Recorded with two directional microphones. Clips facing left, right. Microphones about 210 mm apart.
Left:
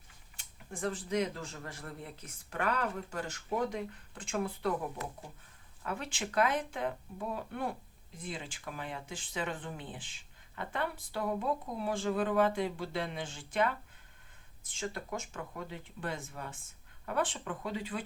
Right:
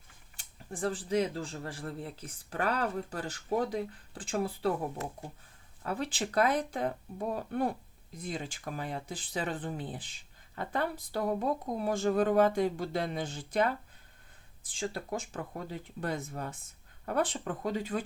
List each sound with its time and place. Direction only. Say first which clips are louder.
0.3 s speech: right 4 dB; 35° right (ahead or behind)